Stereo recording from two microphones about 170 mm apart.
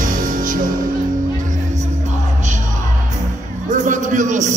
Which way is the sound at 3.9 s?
45° right (ahead or behind).